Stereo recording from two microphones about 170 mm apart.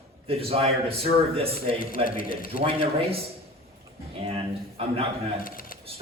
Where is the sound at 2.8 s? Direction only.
35° right (ahead or behind).